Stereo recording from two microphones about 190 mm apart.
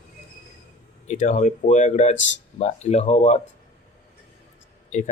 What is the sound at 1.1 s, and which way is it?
Speech, 40° left (ahead or behind).